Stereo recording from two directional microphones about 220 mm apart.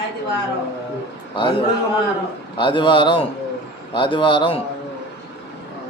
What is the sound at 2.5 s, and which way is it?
Speech, 20° left (ahead or behind).